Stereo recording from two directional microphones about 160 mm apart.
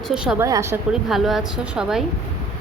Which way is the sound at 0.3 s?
20° right (ahead or behind).